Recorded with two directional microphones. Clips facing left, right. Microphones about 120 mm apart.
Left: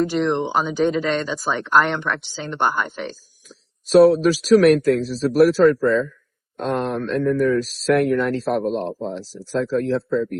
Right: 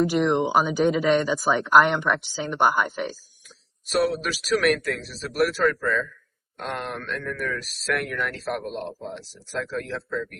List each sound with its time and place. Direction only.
0.0 s speech: 10° right (ahead or behind)
3.8 s speech: 35° left (ahead or behind)